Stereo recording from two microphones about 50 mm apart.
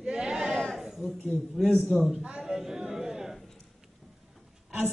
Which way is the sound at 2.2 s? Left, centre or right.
Centre.